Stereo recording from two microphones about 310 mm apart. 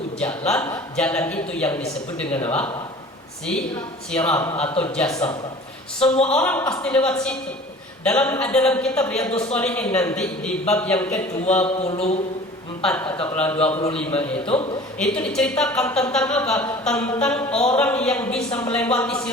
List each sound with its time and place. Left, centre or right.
0.2 s a woman's voice: centre
6.4 s speech: centre
9.3 s a woman's voice: centre
9.6 s speech: centre
11.7 s a woman's voice: centre
12.8 s speech: centre
14.4 s speech: centre
14.9 s speech: centre